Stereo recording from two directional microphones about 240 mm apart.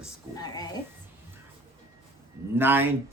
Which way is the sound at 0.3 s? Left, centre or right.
Centre.